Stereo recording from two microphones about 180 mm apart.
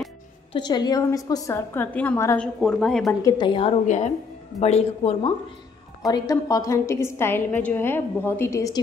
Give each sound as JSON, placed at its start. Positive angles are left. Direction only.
{"t": 0.5, "sound": "a woman's voice", "side_deg": 25}
{"t": 3.2, "sound": "a woman's voice", "side_deg": 20}
{"t": 3.8, "sound": "a man's voice", "side_deg": 40}
{"t": 6.0, "sound": "a woman's voice", "side_deg": 20}